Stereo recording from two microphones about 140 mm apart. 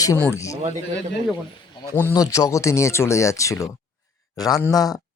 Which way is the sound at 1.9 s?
20° left (ahead or behind).